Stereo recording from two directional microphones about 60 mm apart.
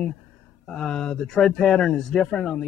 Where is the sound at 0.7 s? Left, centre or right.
Centre.